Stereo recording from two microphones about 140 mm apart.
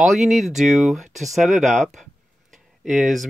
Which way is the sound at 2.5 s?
Centre (ahead or behind).